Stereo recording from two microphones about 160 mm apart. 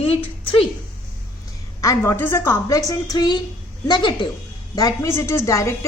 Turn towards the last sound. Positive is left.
turn(degrees=20)  # may be behind; listen again after turning